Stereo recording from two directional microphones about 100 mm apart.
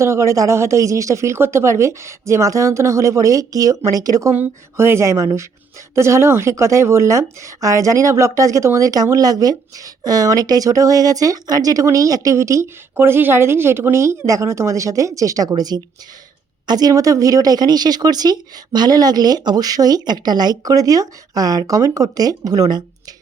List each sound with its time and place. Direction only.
0.0 s speech: 30° right (ahead or behind)
4.4 s a sound: 25° right (ahead or behind)
5.9 s speech: 30° right (ahead or behind)